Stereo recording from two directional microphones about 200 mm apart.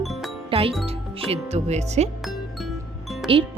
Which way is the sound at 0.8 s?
30° right (ahead or behind).